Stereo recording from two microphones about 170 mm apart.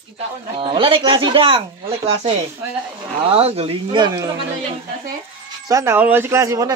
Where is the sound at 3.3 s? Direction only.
35° right (ahead or behind).